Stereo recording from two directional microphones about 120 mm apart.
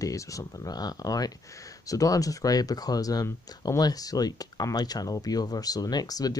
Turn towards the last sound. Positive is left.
turn(degrees=30)  # may be behind; listen again after turning